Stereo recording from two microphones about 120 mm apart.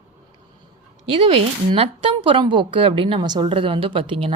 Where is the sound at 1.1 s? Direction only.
50° right (ahead or behind).